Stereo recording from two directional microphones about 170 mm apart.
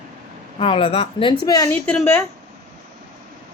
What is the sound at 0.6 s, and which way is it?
Speech, 30° left (ahead or behind).